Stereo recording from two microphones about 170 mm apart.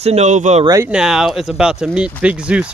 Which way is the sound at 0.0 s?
40° right (ahead or behind).